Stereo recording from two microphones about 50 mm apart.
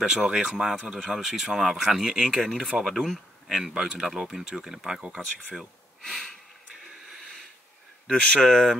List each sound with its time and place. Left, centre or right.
0.0 s speech: centre
2.3 s speech: centre
6.0 s speech: centre
8.1 s speech: centre
8.5 s speech: centre